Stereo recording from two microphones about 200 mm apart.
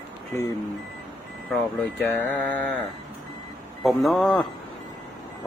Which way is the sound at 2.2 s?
10° left (ahead or behind).